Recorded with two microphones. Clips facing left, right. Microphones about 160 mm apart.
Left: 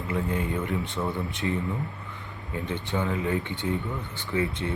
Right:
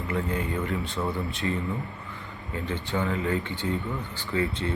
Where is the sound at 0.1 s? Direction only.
20° left (ahead or behind).